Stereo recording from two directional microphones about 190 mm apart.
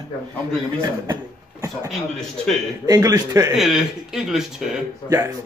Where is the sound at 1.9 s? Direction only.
Centre (ahead or behind).